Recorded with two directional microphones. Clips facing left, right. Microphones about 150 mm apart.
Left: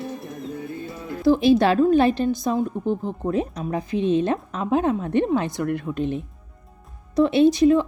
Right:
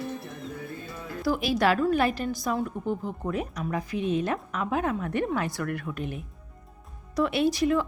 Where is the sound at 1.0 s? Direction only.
25° left (ahead or behind).